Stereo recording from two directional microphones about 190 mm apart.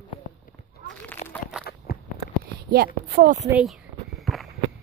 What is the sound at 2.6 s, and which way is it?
Speech, 55° right (ahead or behind).